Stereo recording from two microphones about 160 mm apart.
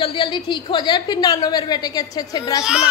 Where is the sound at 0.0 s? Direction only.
35° left (ahead or behind).